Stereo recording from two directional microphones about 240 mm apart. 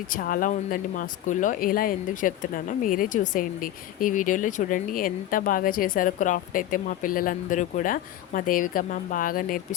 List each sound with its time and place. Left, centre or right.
0.1 s speech: left